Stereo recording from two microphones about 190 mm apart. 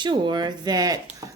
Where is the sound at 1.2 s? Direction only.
20° right (ahead or behind).